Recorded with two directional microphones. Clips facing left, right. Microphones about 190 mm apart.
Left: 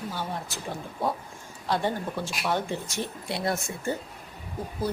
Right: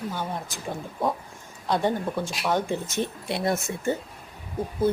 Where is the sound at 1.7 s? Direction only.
15° right (ahead or behind).